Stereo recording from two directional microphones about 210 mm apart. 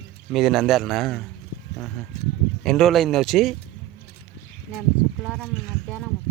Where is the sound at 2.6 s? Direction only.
Centre (ahead or behind).